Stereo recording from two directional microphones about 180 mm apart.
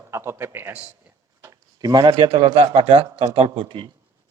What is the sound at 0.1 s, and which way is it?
A man's voice, 15° right (ahead or behind).